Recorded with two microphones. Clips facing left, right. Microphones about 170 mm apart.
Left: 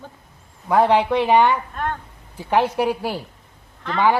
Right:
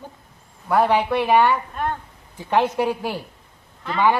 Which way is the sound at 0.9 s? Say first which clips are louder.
Left 1 dB; 10° right (ahead or behind).